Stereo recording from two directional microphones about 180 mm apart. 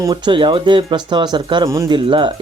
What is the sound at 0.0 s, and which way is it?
Speech, 25° right (ahead or behind).